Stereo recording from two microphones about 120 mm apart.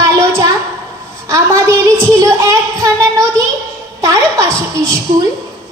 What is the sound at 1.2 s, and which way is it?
A woman's voice, 25° right (ahead or behind).